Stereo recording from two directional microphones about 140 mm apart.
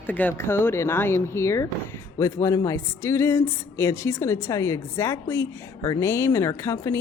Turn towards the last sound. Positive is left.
turn(degrees=20)  # may be behind; listen again after turning